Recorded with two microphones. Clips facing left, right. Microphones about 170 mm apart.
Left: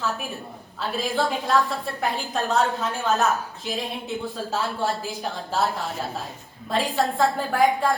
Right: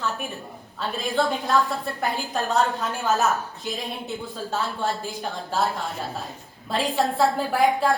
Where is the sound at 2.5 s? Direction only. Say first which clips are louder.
Even; centre (ahead or behind).